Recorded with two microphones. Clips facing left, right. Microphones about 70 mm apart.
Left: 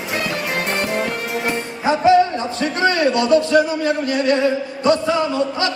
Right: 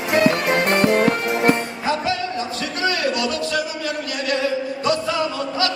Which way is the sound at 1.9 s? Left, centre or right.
Left.